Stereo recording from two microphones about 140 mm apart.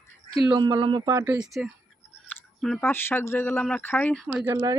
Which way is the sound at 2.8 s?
15° left (ahead or behind).